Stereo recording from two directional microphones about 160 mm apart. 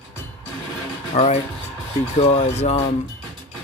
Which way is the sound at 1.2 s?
45° left (ahead or behind).